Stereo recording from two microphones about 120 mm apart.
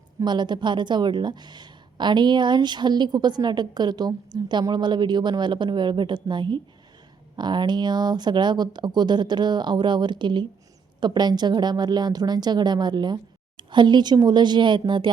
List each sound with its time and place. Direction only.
0.2 s a woman's voice: 40° right (ahead or behind)